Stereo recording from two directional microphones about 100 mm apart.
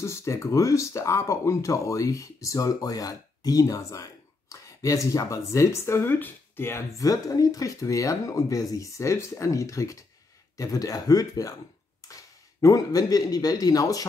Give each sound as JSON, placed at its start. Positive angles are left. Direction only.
{"t": 0.0, "sound": "speech", "side_deg": 30}
{"t": 7.0, "sound": "speech", "side_deg": 35}